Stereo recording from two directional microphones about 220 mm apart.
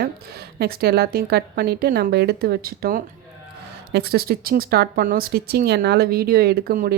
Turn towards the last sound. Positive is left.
turn(degrees=-45)  # may be behind; listen again after turning